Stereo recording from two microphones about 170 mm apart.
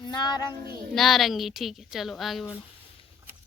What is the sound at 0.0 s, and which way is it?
Speech, 25° left (ahead or behind).